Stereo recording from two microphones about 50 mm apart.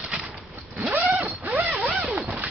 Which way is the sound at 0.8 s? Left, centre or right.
Right.